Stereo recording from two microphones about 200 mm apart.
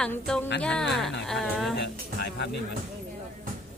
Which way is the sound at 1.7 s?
60° left (ahead or behind).